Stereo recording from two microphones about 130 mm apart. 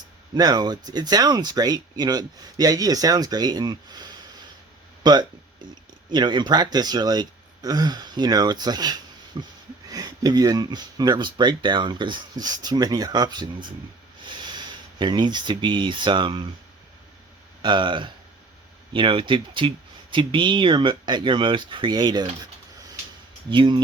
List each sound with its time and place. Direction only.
0.3 s speech: 30° right (ahead or behind)
17.6 s speech: 40° right (ahead or behind)
23.5 s speech: 40° right (ahead or behind)